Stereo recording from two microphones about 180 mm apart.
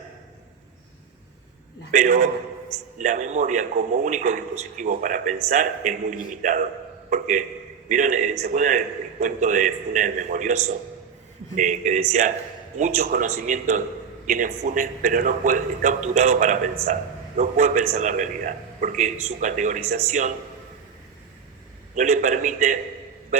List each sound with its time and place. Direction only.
1.9 s a man's voice: 45° right (ahead or behind)
21.9 s a man's voice: 40° right (ahead or behind)